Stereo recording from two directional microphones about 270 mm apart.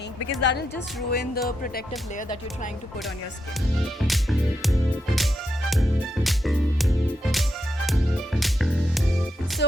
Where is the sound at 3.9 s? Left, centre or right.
Centre.